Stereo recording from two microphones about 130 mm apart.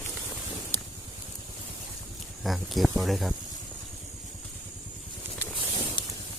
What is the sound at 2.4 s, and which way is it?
Speech, centre (ahead or behind).